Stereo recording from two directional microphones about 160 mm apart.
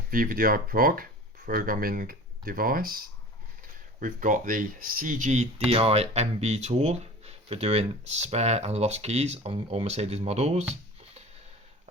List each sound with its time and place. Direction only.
0.1 s speech: 60° right (ahead or behind)
4.0 s speech: 55° right (ahead or behind)